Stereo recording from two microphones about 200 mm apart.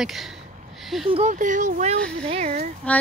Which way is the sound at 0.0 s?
Centre (ahead or behind).